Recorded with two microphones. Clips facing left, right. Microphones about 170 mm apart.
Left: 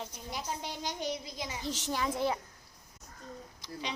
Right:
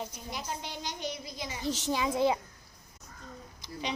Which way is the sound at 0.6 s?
45° left (ahead or behind).